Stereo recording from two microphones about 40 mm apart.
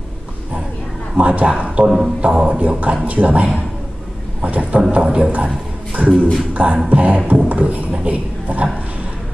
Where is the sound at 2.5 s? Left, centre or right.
Right.